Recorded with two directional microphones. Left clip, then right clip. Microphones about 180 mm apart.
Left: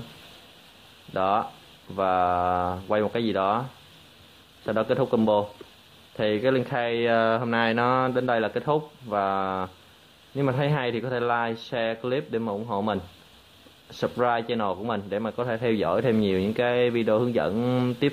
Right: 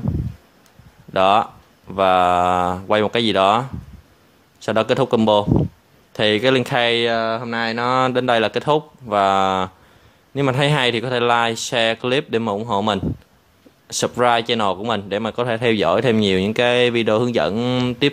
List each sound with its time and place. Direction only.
1.1 s a man's voice: 35° right (ahead or behind)
4.6 s a man's voice: 35° right (ahead or behind)
7.1 s speech: 15° right (ahead or behind)
8.0 s a man's voice: 30° right (ahead or behind)